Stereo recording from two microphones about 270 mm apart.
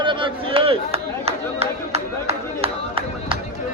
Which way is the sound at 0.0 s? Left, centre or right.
Centre.